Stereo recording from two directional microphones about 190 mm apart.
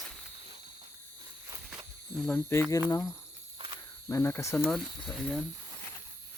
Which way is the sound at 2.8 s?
15° left (ahead or behind).